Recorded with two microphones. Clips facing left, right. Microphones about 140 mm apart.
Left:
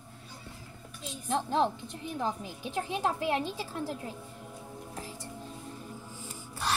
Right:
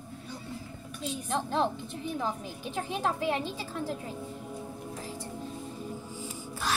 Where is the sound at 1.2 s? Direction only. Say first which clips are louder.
Left 2 dB; centre (ahead or behind).